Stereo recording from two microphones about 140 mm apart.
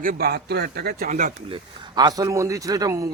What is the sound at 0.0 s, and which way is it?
A man's voice, 85° right.